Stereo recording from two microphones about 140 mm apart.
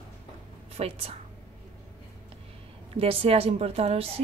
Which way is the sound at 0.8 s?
45° right (ahead or behind).